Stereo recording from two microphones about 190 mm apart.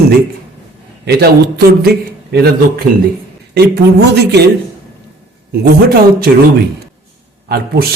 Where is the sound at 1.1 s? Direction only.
60° right (ahead or behind).